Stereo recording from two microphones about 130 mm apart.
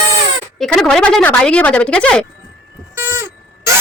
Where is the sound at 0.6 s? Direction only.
5° left (ahead or behind).